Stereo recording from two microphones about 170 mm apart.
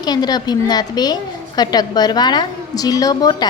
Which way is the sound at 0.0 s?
25° left (ahead or behind).